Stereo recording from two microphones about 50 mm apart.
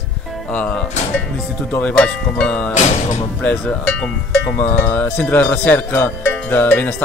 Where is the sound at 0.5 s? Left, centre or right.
Left.